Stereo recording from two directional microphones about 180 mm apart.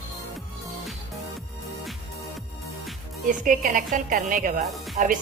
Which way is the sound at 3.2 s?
50° right (ahead or behind).